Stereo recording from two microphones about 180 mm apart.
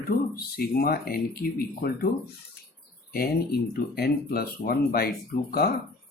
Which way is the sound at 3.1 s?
60° left (ahead or behind).